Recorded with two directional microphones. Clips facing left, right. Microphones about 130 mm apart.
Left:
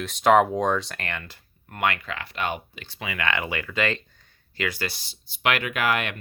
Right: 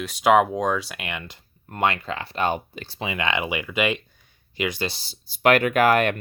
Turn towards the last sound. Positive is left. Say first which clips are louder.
# right 7 dB
turn(degrees=-45)  # may be behind; listen again after turning